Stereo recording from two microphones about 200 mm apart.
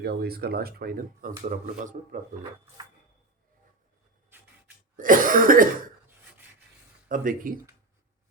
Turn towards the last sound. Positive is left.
turn(degrees=-45)  # may be behind; listen again after turning